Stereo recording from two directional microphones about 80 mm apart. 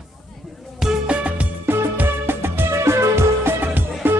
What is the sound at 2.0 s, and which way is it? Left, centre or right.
Music, right.